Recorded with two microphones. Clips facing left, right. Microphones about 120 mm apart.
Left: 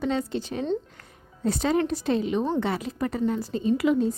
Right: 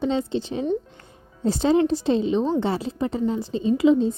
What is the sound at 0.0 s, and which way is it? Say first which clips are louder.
A woman's voice: right 3 dB; 25° right (ahead or behind).